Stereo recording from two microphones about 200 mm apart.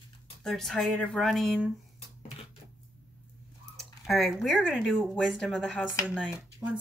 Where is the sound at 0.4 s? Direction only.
Centre (ahead or behind).